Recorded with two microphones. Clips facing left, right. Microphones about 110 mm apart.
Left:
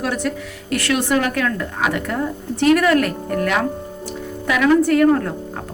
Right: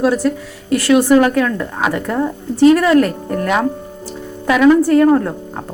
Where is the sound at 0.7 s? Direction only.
30° right (ahead or behind).